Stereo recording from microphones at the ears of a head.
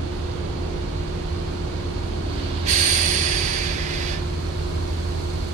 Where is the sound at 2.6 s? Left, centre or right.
Right.